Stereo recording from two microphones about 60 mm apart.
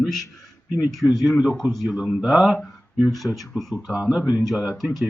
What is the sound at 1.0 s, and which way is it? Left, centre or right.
Speech, centre.